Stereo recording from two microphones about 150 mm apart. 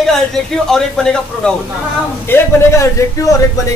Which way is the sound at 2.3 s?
20° left (ahead or behind).